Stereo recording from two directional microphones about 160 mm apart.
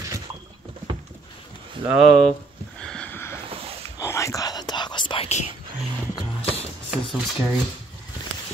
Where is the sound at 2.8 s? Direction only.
5° left (ahead or behind).